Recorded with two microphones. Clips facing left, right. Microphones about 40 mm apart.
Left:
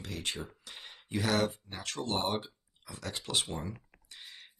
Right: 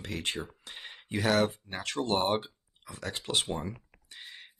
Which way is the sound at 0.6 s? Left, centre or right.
Right.